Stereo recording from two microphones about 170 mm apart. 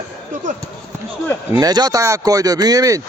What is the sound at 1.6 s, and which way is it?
Speech, 20° right (ahead or behind).